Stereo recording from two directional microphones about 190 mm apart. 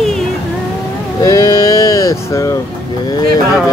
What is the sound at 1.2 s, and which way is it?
Sheep, 20° left (ahead or behind).